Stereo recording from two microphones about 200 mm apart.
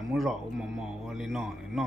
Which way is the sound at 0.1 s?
Centre (ahead or behind).